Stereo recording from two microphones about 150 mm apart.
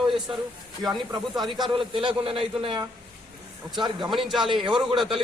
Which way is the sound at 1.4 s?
35° right (ahead or behind).